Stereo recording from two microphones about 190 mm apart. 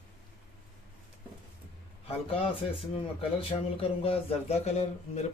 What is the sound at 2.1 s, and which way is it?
A man's voice, 30° left (ahead or behind).